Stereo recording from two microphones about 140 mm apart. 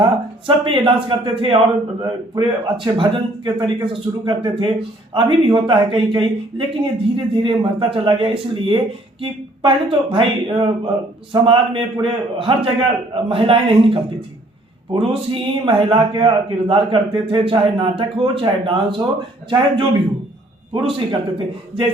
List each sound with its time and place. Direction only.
0.0 s speech: 35° right (ahead or behind)